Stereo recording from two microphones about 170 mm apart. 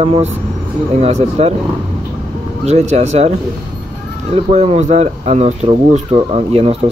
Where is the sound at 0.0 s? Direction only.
35° right (ahead or behind).